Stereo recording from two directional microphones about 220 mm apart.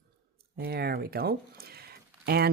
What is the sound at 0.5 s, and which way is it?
Speech, 45° right (ahead or behind).